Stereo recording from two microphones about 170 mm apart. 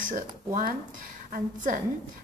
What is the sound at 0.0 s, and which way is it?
Speech, 50° right (ahead or behind).